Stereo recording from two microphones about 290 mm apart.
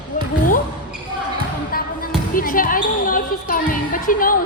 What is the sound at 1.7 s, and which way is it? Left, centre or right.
Basketball bounce, left.